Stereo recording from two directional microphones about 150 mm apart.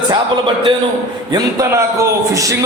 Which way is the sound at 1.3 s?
25° right (ahead or behind).